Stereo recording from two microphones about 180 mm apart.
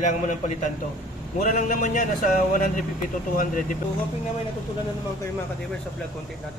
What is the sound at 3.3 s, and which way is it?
Speech, 45° left (ahead or behind).